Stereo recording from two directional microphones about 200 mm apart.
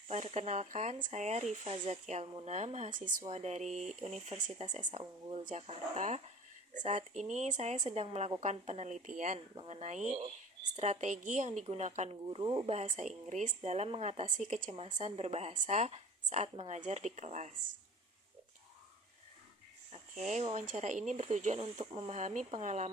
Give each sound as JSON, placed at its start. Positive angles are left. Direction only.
{"t": 0.1, "sound": "a woman's voice", "side_deg": -35}
{"t": 20.2, "sound": "a woman's voice", "side_deg": -35}